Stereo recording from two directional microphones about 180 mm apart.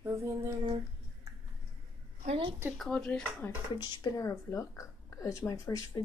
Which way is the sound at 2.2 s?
30° right (ahead or behind).